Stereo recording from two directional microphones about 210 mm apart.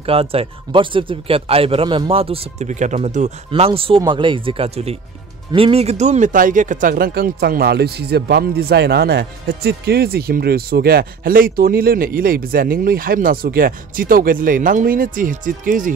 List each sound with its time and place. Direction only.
0.0 s speech: 25° right (ahead or behind)